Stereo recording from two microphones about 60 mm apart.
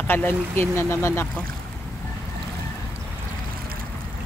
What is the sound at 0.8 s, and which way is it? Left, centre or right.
Speech, left.